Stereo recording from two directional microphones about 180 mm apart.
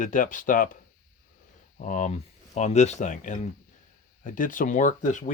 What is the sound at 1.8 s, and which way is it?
Speech, 45° left (ahead or behind).